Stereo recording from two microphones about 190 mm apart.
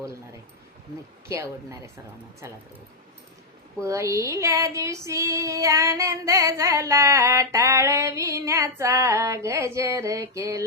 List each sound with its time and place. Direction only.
2.4 s female singing: 15° right (ahead or behind)
3.8 s female singing: 15° right (ahead or behind)